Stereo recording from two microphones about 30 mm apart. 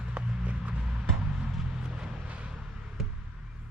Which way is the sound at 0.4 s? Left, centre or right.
Right.